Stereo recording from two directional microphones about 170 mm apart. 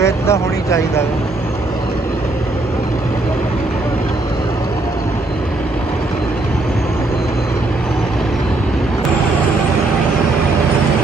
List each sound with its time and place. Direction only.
0.0 s speech: 15° left (ahead or behind)